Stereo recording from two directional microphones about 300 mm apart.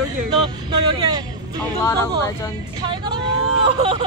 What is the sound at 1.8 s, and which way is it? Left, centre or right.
Speech, centre.